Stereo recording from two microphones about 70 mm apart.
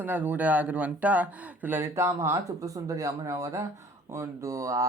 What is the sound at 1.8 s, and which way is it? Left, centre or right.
Speech, right.